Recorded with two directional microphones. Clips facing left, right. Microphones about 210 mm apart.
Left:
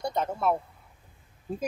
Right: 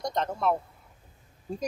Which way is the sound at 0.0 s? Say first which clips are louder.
Even; 5° left (ahead or behind).